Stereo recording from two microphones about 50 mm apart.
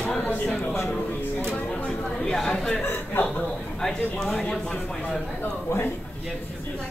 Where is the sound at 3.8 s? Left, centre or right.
Centre.